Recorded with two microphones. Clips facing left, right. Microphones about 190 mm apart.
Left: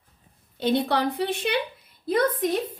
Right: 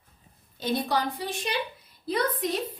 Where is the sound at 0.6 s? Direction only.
65° left (ahead or behind).